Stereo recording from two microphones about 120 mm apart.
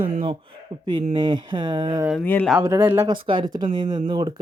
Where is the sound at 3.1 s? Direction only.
40° right (ahead or behind).